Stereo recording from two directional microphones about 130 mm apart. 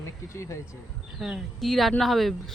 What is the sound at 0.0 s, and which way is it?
Speech, 20° left (ahead or behind).